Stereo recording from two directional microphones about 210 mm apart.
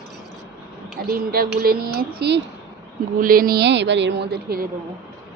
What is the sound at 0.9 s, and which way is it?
A woman's voice, 45° right (ahead or behind).